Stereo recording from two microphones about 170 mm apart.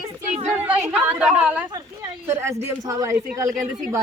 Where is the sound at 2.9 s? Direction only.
15° right (ahead or behind).